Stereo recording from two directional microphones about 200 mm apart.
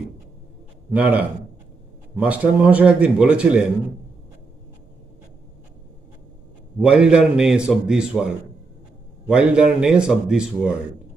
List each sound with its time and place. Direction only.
0.9 s a man's voice: 10° right (ahead or behind)
6.7 s a man's voice: 5° right (ahead or behind)